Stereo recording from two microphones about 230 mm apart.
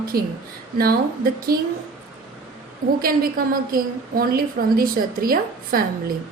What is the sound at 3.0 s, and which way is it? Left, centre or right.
A woman's voice, right.